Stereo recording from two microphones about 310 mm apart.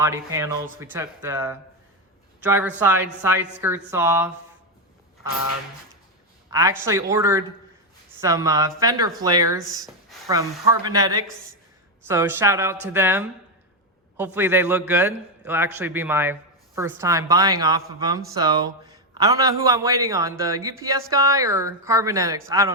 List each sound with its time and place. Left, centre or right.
0.0 s a man's voice: centre
6.5 s a man's voice: centre
14.3 s a man's voice: centre